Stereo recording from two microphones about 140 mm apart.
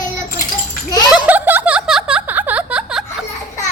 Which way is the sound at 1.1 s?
10° right (ahead or behind).